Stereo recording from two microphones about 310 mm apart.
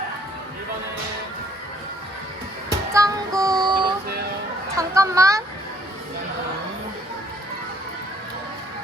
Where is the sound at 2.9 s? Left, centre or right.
Centre.